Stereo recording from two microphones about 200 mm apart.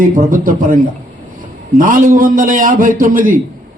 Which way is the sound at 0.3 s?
45° right (ahead or behind).